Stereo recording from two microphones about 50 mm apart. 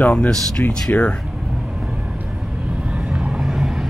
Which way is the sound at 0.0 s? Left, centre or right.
Left.